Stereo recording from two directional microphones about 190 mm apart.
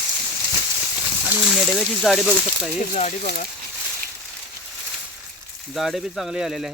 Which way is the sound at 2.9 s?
40° left (ahead or behind).